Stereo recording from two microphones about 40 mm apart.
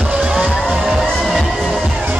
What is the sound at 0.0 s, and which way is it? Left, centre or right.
Music, right.